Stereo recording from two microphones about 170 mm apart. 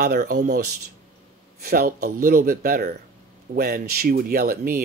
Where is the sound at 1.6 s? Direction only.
60° right (ahead or behind).